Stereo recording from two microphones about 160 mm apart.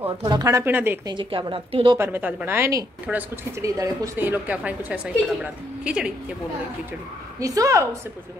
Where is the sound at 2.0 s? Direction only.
10° right (ahead or behind).